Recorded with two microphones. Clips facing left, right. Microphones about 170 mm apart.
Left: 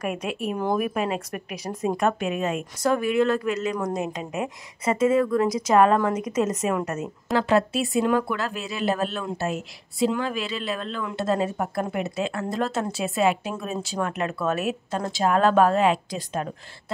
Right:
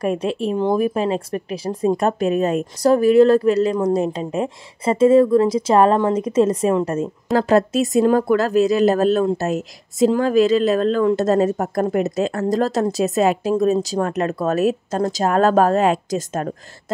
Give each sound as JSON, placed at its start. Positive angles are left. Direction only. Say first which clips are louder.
{"t": 0.0, "sound": "speech", "louder": "right 7 dB", "side_deg": -30}
{"t": 7.3, "sound": "speech", "louder": "right 5 dB", "side_deg": -40}